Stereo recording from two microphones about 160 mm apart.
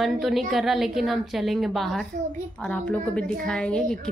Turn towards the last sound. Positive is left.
turn(degrees=5)  # may be behind; listen again after turning